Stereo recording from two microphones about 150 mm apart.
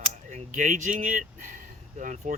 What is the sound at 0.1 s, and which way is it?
Speech, 50° right (ahead or behind).